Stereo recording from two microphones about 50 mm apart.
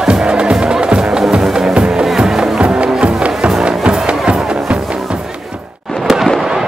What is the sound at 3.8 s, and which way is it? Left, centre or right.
Music, centre.